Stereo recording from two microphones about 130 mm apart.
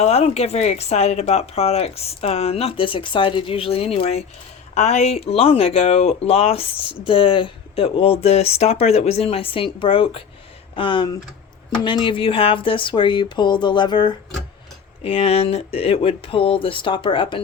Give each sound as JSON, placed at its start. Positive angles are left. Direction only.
{"t": 0.0, "sound": "speech", "side_deg": 55}
{"t": 15.0, "sound": "speech", "side_deg": 50}